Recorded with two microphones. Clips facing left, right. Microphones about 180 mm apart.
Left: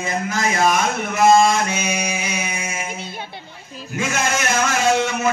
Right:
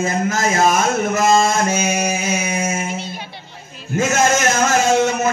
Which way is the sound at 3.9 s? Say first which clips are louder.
Right 6 dB; 45° right (ahead or behind).